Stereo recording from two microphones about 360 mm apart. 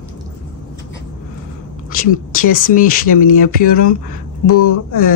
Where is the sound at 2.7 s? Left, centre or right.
Left.